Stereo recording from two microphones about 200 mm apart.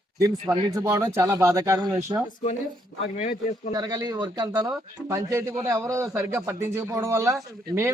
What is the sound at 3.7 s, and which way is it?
Speech, 20° right (ahead or behind).